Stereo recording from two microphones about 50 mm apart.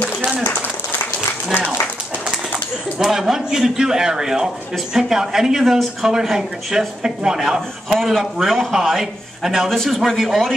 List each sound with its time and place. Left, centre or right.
0.4 s a sound: left
3.0 s speech: centre
9.7 s a man's voice: centre